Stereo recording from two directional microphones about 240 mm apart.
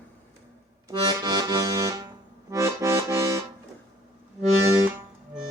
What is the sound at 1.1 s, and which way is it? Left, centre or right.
Accordion, centre.